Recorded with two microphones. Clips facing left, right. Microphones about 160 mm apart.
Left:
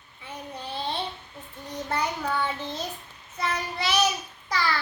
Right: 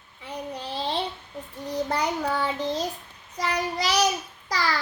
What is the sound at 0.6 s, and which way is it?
Child singing, 30° right (ahead or behind).